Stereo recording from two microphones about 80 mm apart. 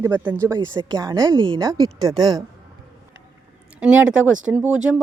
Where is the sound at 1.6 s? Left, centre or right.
Right.